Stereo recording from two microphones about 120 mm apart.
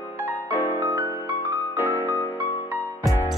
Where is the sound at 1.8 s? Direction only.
15° left (ahead or behind).